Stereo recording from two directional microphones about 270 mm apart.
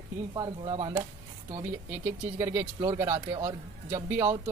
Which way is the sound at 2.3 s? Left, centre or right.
Centre.